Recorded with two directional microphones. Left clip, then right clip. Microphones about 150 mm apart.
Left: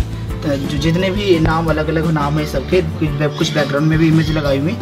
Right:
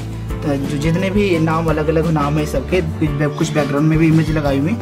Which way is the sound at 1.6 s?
5° right (ahead or behind).